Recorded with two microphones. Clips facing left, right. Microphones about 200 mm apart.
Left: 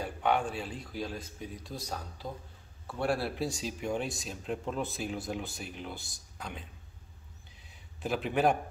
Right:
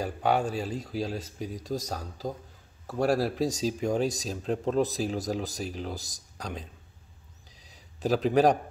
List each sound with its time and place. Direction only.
0.0 s speech: 40° right (ahead or behind)
7.7 s a man's voice: 35° right (ahead or behind)